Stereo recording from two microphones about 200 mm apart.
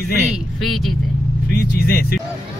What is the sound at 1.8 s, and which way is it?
Speech, 50° left (ahead or behind).